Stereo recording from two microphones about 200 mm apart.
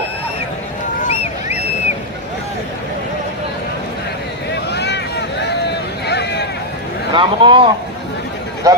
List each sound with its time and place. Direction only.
1.0 s a sound: 30° left (ahead or behind)
4.7 s vehicle: 55° left (ahead or behind)
7.1 s speech: 25° right (ahead or behind)